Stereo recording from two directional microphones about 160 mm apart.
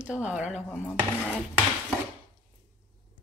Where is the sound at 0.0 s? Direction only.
5° right (ahead or behind).